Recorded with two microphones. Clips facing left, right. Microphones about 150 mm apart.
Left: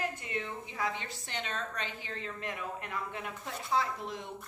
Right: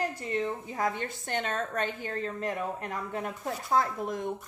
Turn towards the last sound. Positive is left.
turn(degrees=-50)  # may be behind; listen again after turning